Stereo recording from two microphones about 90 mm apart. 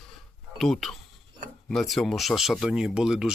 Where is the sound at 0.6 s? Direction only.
5° left (ahead or behind).